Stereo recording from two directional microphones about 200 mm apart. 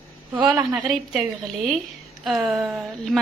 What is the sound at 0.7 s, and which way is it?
Speech, centre (ahead or behind).